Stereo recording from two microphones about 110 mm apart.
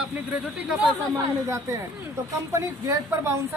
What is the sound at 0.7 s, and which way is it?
Speech, 5° right (ahead or behind).